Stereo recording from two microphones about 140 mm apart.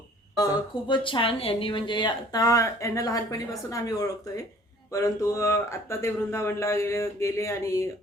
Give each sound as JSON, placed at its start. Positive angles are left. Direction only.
{"t": 0.3, "sound": "speech", "side_deg": 30}